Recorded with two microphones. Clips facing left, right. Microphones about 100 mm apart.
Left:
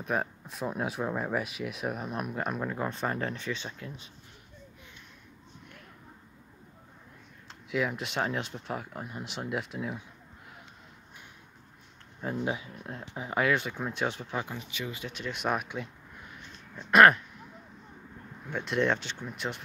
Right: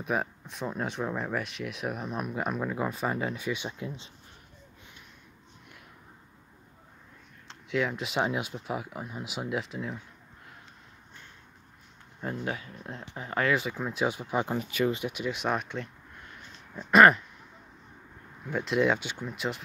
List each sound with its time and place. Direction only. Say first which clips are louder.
0.0 s speech: right 1 dB; centre (ahead or behind); by 4.1 s 20° right (ahead or behind)
7.4 s speech: right 1 dB; centre (ahead or behind)
12.2 s speech: left 2 dB; 5° left (ahead or behind)
12.4 s speech: left 2 dB; 15° left (ahead or behind)
12.7 s speech: left 1 dB; 5° left (ahead or behind)
13.5 s speech: right 1 dB; centre (ahead or behind)
14.6 s speech: right 10 dB; 50° right (ahead or behind)
15.0 s speech: right 2 dB; 5° right (ahead or behind)
16.9 s speech: right 1 dB; centre (ahead or behind)
18.5 s speech: right 2 dB; centre (ahead or behind)